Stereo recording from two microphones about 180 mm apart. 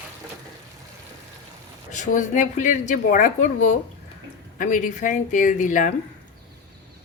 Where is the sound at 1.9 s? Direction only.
45° left (ahead or behind).